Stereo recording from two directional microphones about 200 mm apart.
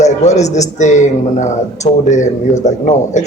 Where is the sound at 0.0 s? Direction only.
35° left (ahead or behind).